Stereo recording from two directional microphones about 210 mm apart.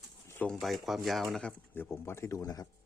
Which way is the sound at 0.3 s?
5° left (ahead or behind).